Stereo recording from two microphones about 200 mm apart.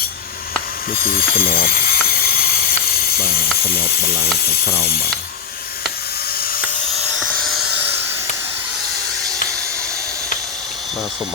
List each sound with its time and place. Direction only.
0.9 s mechanisms: 45° left (ahead or behind)
3.7 s speech: 50° left (ahead or behind)
7.2 s a sound: centre (ahead or behind)